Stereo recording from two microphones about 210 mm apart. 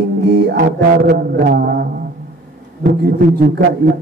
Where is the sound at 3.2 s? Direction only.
50° right (ahead or behind).